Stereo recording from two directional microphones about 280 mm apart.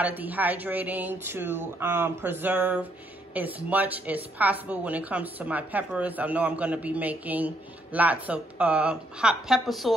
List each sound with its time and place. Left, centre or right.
0.0 s a woman's voice: centre